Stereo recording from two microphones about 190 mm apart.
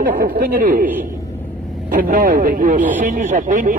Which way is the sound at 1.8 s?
45° right (ahead or behind).